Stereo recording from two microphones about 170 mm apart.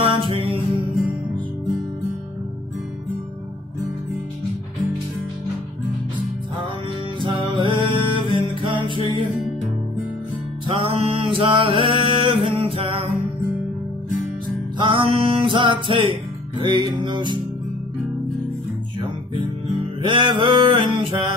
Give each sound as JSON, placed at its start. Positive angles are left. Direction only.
{"t": 0.2, "sound": "music", "side_deg": -30}
{"t": 7.5, "sound": "music", "side_deg": -30}
{"t": 10.7, "sound": "a sound", "side_deg": -35}
{"t": 14.8, "sound": "music", "side_deg": -30}
{"t": 20.0, "sound": "music", "side_deg": -30}